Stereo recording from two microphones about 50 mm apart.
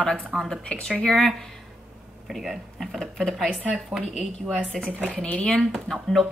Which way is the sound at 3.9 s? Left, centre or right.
Centre.